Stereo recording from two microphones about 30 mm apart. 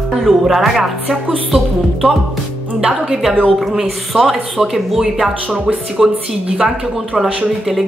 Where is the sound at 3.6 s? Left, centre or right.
Centre.